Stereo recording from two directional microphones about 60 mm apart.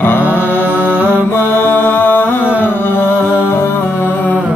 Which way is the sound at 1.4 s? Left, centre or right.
Left.